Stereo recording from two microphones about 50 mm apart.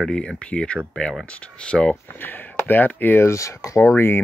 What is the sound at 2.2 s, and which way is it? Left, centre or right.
Speech, left.